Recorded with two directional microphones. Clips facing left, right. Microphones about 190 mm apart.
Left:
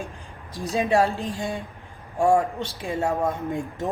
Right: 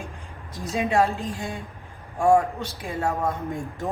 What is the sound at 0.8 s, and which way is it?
A man's voice, 35° left (ahead or behind).